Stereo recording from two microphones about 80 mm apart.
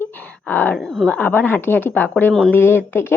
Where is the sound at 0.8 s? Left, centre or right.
Centre.